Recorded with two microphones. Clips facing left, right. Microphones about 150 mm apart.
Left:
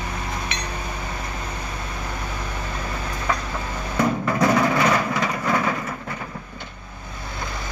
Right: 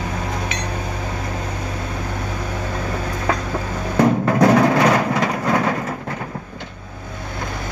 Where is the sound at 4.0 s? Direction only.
60° right (ahead or behind).